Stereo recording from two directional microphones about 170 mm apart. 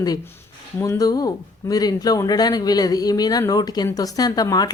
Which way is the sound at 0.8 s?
20° left (ahead or behind).